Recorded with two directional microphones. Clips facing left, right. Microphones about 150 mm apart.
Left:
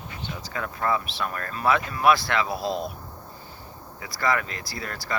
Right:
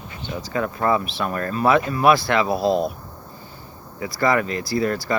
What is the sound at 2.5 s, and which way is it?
Speech, 60° right (ahead or behind).